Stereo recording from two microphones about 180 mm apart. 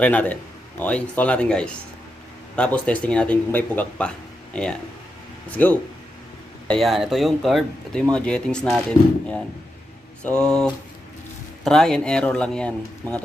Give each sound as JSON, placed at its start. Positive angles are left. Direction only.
{"t": 0.0, "sound": "speech", "side_deg": 10}
{"t": 10.2, "sound": "speech", "side_deg": 5}